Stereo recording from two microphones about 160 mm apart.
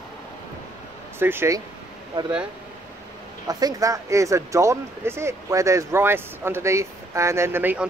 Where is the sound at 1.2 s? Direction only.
15° right (ahead or behind).